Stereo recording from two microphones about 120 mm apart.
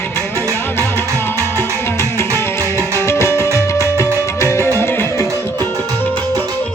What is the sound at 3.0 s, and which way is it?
Music, 20° left (ahead or behind).